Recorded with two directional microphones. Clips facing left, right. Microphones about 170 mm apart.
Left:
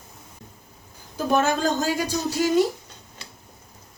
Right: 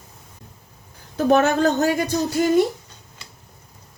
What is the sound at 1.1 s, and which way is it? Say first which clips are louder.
Speech: right 5 dB; 65° right (ahead or behind).